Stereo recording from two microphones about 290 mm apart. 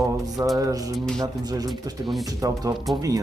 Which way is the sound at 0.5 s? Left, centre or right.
Centre.